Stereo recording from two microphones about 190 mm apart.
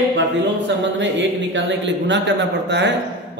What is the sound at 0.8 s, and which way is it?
A man's voice, 75° right (ahead or behind).